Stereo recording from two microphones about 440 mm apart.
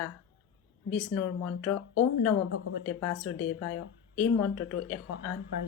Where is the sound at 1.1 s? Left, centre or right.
Left.